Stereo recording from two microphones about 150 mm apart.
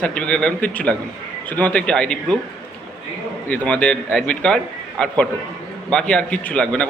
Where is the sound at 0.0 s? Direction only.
5° left (ahead or behind).